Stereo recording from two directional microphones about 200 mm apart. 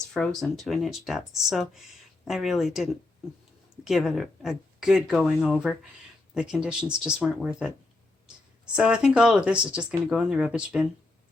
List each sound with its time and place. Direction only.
0.1 s speech: centre (ahead or behind)